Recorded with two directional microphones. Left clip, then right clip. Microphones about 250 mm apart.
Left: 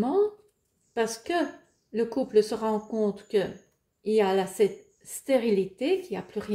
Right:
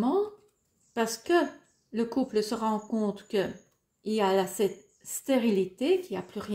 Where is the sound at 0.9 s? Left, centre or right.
Right.